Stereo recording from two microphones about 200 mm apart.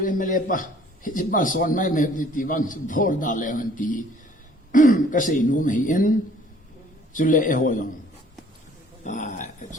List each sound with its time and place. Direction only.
0.0 s a man's voice: 40° left (ahead or behind)
9.0 s a man's voice: 40° left (ahead or behind)